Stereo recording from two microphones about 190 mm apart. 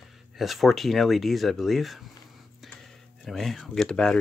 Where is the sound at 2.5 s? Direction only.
Centre (ahead or behind).